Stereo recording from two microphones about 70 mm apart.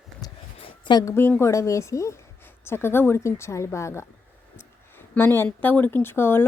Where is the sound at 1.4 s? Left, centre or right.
Left.